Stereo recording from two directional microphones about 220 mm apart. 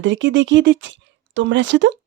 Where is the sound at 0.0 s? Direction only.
55° right (ahead or behind).